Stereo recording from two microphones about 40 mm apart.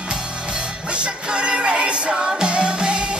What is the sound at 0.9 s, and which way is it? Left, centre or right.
Music, right.